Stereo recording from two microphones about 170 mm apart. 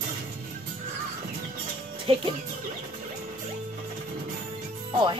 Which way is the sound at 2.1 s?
35° right (ahead or behind).